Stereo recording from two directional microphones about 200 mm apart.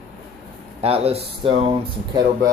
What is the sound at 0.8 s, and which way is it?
Speech, 30° right (ahead or behind).